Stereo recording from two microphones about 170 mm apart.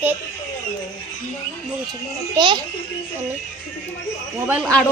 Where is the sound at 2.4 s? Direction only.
25° right (ahead or behind).